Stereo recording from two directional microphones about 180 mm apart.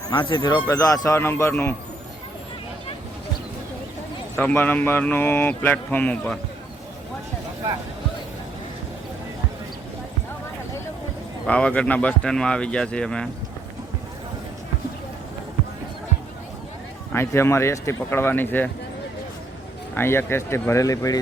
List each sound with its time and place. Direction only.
0.1 s speech: 25° left (ahead or behind)
4.4 s speech: 10° left (ahead or behind)
11.4 s speech: 5° left (ahead or behind)
17.1 s speech: 15° left (ahead or behind)
19.9 s speech: 15° left (ahead or behind)